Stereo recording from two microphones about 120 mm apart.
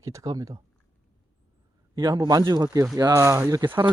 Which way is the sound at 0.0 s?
25° right (ahead or behind).